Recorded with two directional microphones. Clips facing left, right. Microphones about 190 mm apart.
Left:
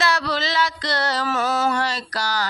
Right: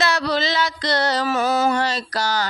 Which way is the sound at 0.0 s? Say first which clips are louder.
Right 2 dB; 20° right (ahead or behind).